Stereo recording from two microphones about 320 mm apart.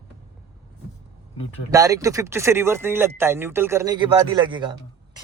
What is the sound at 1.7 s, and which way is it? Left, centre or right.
Speech, centre.